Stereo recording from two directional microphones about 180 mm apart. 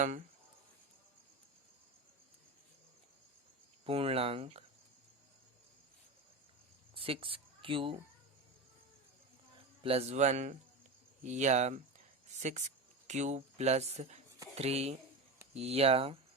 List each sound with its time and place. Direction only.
3.8 s speech: 30° right (ahead or behind)
6.9 s speech: 30° right (ahead or behind)
9.8 s speech: 35° right (ahead or behind)
14.3 s a sound: 20° right (ahead or behind)
14.5 s speech: 35° right (ahead or behind)